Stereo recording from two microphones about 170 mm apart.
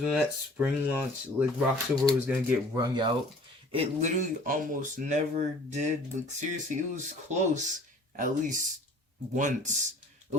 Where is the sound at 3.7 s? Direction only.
35° right (ahead or behind).